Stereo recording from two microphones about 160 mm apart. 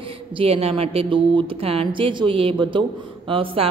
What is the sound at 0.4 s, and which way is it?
A woman's voice, 40° right (ahead or behind).